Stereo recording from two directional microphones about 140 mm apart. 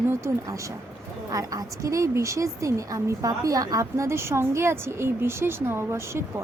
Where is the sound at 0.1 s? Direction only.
20° right (ahead or behind).